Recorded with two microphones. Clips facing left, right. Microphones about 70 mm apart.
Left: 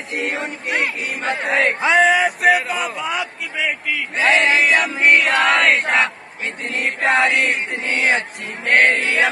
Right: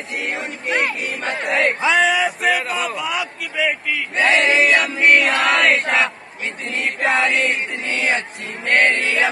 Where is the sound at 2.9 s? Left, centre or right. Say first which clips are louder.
Even; left.